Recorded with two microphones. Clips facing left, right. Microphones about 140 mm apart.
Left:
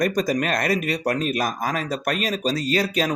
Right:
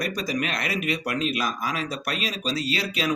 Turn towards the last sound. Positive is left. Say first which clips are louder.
# left 5 dB
turn(degrees=45)  # may be behind; listen again after turning